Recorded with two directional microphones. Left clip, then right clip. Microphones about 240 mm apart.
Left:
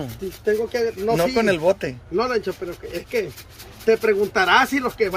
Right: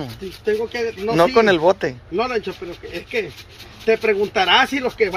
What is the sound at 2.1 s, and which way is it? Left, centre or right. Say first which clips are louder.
Speech: left 1 dB; centre.